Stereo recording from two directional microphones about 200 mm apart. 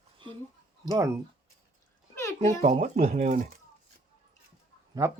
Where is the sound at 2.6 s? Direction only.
40° right (ahead or behind).